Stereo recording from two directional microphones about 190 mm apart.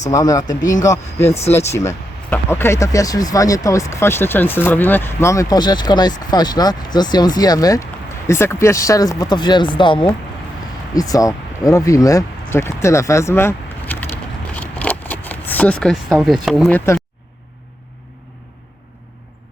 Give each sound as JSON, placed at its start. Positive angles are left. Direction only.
{"t": 0.1, "sound": "speech", "side_deg": 20}
{"t": 1.3, "sound": "speech", "side_deg": 35}
{"t": 1.5, "sound": "speech", "side_deg": 15}
{"t": 14.5, "sound": "a sound", "side_deg": 10}
{"t": 16.7, "sound": "speech", "side_deg": 15}